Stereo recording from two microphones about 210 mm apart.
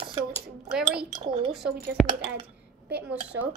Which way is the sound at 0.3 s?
5° right (ahead or behind).